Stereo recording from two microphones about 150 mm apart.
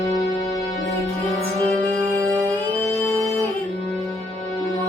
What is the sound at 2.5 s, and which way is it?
Music, 10° left (ahead or behind).